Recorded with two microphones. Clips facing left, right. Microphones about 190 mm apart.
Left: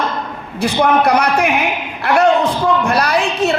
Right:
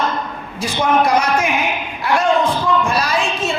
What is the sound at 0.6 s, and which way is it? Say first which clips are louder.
Speech: left 3 dB; 65° left (ahead or behind).